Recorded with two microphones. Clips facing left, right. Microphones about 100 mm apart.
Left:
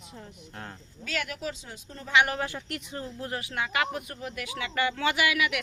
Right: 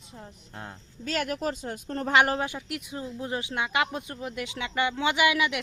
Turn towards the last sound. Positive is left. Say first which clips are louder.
# right 2 dB
turn(degrees=-25)  # may be behind; listen again after turning